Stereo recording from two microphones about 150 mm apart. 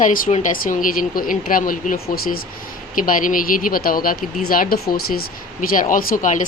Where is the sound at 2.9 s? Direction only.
65° left (ahead or behind).